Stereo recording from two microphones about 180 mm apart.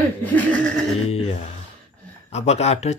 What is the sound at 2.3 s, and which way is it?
Speech, 35° left (ahead or behind).